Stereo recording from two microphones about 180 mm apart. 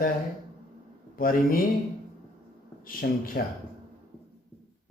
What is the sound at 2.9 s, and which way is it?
Speech, 55° left (ahead or behind).